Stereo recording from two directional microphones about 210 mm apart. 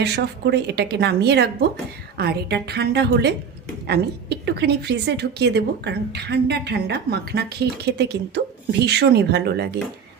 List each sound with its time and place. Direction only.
0.0 s a woman's voice: 50° right (ahead or behind)